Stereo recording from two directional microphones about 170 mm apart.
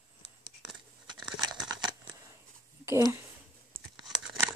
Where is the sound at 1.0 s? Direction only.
25° right (ahead or behind).